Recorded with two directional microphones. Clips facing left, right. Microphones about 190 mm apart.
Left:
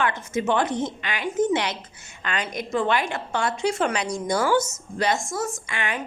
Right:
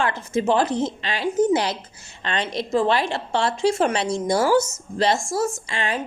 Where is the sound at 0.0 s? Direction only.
30° right (ahead or behind).